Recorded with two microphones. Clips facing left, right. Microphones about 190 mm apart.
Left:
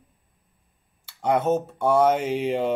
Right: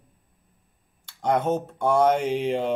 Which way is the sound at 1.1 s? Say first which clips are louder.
Left 1 dB; 5° left (ahead or behind).